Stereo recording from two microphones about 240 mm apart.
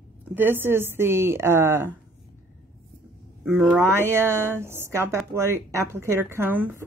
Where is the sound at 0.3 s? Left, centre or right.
Centre.